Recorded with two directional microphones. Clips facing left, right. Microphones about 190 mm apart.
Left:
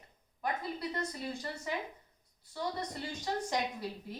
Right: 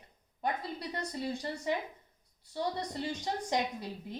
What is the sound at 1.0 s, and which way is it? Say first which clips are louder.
Speech: right 2 dB; 25° right (ahead or behind).